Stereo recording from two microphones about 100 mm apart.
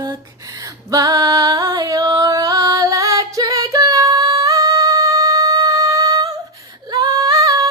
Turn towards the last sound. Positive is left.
turn(degrees=-35)  # may be behind; listen again after turning